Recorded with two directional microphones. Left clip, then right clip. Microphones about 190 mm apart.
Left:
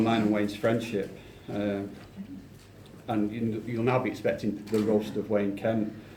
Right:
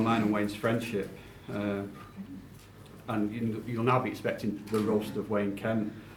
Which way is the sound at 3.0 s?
15° right (ahead or behind).